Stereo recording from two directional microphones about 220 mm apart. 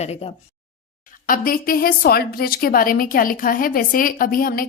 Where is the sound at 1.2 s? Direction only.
40° left (ahead or behind).